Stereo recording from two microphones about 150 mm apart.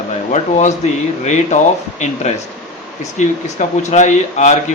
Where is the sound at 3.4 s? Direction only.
50° left (ahead or behind).